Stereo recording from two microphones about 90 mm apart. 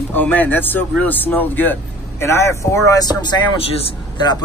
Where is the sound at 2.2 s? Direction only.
30° left (ahead or behind).